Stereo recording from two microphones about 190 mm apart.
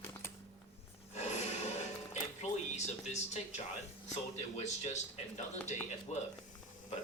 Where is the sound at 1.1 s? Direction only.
35° left (ahead or behind).